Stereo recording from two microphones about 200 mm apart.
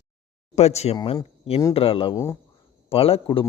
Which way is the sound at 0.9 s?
20° left (ahead or behind).